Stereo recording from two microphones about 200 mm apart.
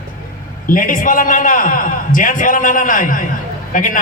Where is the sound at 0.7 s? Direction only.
40° left (ahead or behind).